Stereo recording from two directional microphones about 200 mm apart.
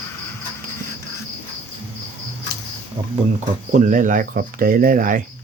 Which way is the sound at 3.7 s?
40° right (ahead or behind).